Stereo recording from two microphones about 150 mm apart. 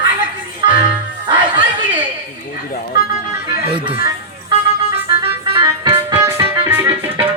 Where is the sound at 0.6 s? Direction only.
35° right (ahead or behind).